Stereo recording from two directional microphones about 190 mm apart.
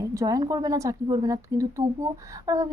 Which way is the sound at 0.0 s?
15° right (ahead or behind).